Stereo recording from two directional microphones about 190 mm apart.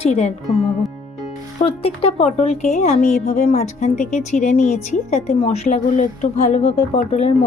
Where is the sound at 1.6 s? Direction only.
30° left (ahead or behind).